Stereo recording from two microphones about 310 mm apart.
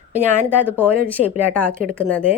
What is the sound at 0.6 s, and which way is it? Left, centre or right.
Speech, centre.